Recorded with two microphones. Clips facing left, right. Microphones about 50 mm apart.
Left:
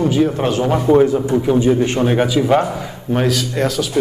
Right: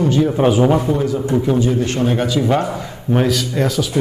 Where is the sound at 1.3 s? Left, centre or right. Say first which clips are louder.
Left 1 dB; centre.